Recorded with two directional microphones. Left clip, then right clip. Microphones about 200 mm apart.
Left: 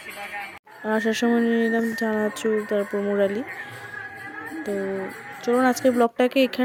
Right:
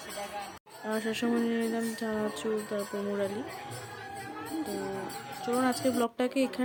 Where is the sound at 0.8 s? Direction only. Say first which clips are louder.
Left 9 dB; 35° left (ahead or behind).